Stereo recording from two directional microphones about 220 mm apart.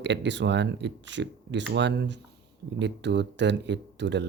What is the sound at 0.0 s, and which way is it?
Speech, 55° right (ahead or behind).